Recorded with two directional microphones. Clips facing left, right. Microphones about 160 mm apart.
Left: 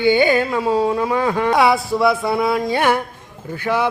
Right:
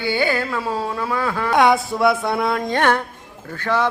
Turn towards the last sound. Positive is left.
turn(degrees=10)  # may be behind; listen again after turning